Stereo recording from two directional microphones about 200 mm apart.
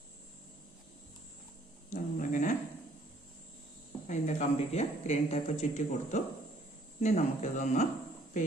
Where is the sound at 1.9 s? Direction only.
40° left (ahead or behind).